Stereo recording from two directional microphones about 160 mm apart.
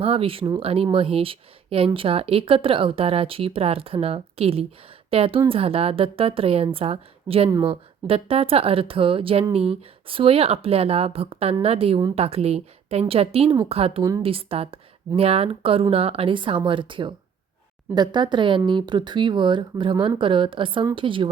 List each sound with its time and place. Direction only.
0.0 s a woman's voice: 35° right (ahead or behind)